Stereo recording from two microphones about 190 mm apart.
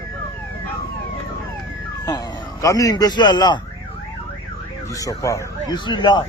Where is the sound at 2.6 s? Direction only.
20° left (ahead or behind).